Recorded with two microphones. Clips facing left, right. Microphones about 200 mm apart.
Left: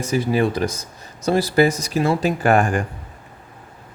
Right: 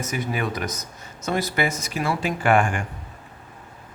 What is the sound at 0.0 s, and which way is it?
Speech, 30° left (ahead or behind).